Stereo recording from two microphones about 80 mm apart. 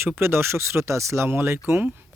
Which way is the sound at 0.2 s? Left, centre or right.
Right.